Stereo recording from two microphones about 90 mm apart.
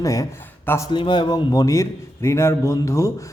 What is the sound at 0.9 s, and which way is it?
A man's voice, 60° left (ahead or behind).